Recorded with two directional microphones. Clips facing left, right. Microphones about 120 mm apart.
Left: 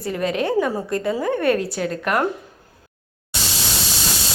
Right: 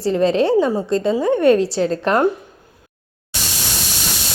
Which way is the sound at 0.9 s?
25° right (ahead or behind).